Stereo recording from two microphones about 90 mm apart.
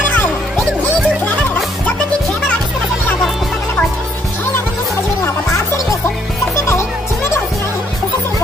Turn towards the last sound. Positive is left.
turn(degrees=35)  # may be behind; listen again after turning